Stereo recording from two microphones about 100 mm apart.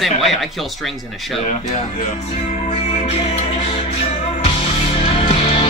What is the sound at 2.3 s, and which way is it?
Music, 90° left.